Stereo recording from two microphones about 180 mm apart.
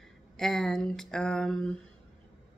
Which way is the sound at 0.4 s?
Centre (ahead or behind).